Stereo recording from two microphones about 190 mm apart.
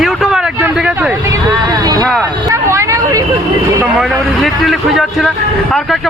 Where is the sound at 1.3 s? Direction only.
20° right (ahead or behind).